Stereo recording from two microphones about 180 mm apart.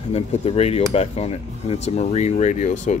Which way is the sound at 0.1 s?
35° left (ahead or behind).